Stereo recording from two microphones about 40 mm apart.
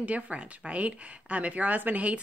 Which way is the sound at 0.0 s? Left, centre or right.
Right.